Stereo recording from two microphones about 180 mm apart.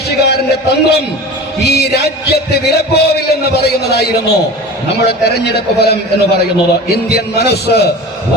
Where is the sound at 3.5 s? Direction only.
65° left (ahead or behind).